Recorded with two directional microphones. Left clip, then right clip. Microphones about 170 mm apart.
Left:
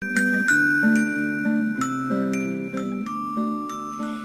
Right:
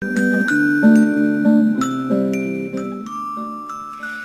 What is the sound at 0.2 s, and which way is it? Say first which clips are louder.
Music: right 2 dB; 30° right (ahead or behind).